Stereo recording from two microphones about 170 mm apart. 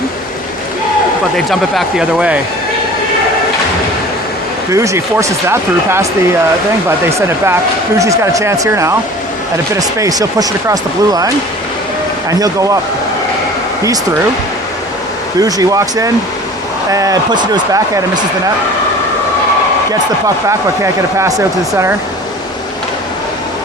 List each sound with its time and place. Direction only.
1.5 s speech: centre (ahead or behind)
4.7 s speech: 15° right (ahead or behind)
7.2 s speech: 15° right (ahead or behind)
12.3 s speech: 20° right (ahead or behind)
15.4 s speech: 20° right (ahead or behind)
19.9 s speech: 20° right (ahead or behind)